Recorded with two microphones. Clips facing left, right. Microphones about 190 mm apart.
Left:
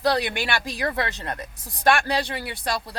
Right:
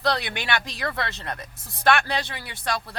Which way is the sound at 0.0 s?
10° left (ahead or behind).